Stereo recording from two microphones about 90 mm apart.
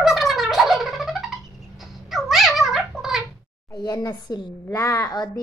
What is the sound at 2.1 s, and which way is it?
Dog, 5° right (ahead or behind).